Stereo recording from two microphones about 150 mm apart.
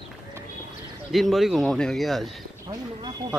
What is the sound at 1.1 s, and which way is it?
A man's voice, centre (ahead or behind).